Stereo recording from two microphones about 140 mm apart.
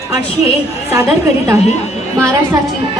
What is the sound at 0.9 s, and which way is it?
Speech, 20° right (ahead or behind).